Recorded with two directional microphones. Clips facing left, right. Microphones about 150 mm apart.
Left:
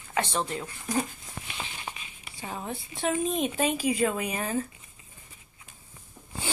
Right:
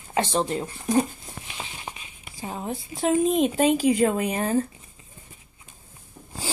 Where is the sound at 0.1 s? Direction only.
30° right (ahead or behind).